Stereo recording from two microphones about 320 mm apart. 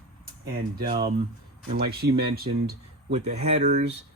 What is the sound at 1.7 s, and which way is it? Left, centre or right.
Speech, right.